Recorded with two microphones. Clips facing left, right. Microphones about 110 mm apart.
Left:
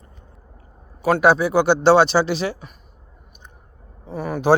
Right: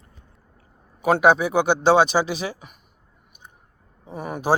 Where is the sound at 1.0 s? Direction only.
20° right (ahead or behind).